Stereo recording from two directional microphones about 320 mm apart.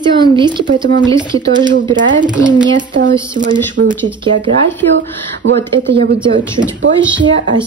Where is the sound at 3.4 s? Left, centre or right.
Right.